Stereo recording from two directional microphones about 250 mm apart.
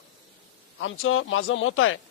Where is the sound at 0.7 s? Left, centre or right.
Left.